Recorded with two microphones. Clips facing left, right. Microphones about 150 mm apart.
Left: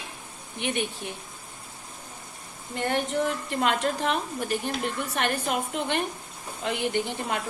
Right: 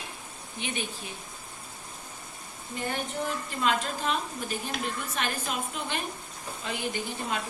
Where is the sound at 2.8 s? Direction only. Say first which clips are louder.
Left 6 dB; 75° left (ahead or behind).